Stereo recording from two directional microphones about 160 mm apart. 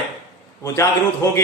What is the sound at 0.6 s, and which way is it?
Speech, 20° left (ahead or behind).